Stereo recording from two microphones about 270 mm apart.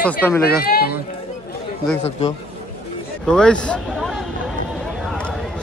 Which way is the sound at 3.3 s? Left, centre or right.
Centre.